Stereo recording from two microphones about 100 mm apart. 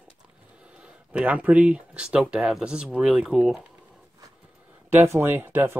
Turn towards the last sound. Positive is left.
turn(degrees=-20)  # may be behind; listen again after turning